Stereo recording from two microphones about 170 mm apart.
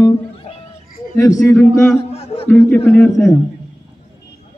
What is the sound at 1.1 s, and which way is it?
Speech, 15° left (ahead or behind).